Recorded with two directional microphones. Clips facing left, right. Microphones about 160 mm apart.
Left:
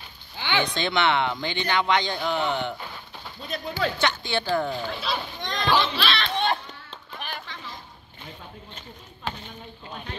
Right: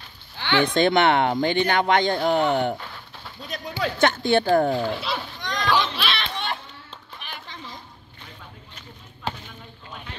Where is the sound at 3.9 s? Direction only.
50° right (ahead or behind).